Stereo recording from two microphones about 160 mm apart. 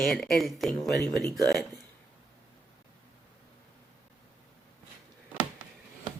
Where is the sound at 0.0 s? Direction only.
Centre (ahead or behind).